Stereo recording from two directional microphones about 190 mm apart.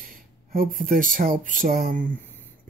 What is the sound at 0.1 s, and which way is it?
Speech, 50° right (ahead or behind).